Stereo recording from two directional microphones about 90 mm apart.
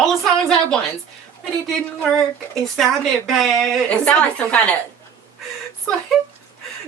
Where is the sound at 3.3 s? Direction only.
5° left (ahead or behind).